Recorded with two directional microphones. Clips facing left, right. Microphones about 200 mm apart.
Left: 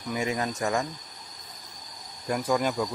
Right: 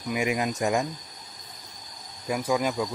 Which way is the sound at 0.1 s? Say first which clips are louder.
Right 2 dB; 15° right (ahead or behind).